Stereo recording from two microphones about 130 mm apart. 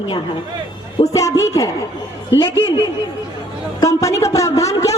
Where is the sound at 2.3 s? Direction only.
40° left (ahead or behind).